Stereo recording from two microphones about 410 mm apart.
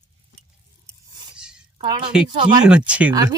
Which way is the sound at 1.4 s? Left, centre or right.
Centre.